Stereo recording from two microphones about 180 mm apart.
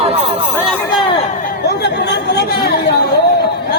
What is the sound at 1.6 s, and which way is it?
Chatter, 70° left (ahead or behind).